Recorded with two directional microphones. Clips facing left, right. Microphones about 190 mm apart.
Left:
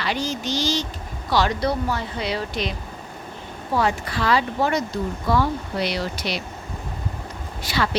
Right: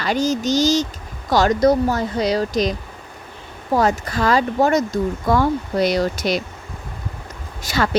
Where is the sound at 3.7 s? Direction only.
45° right (ahead or behind).